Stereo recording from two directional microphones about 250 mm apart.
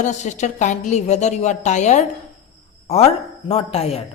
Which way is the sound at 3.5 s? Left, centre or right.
Left.